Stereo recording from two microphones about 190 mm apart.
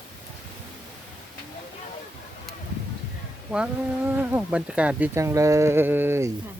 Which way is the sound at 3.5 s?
5° right (ahead or behind).